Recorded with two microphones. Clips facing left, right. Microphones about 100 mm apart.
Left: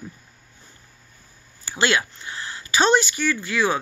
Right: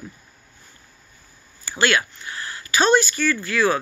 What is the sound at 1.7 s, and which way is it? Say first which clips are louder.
Speech: right 1 dB; 20° left (ahead or behind).